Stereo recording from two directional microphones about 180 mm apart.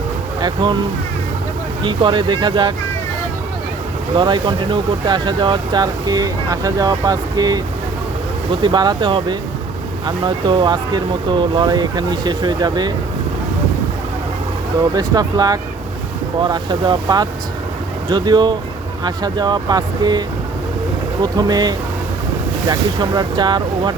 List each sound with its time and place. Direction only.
0.4 s speech: 25° right (ahead or behind)
1.8 s speech: 25° right (ahead or behind)
4.1 s speech: 25° right (ahead or behind)
8.6 s speech: 25° right (ahead or behind)
14.9 s speech: 20° right (ahead or behind)